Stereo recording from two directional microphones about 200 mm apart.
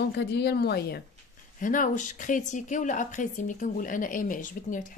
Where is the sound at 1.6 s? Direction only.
40° left (ahead or behind).